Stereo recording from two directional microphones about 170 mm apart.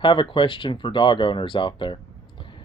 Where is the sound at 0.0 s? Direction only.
30° left (ahead or behind).